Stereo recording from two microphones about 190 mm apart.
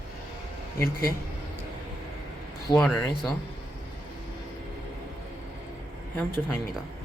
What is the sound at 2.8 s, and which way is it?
Speech, centre (ahead or behind).